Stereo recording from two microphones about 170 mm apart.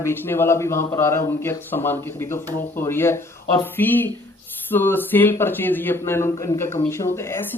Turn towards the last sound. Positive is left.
turn(degrees=15)  # may be behind; listen again after turning